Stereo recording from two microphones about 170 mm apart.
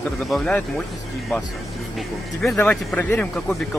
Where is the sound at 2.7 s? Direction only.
10° left (ahead or behind).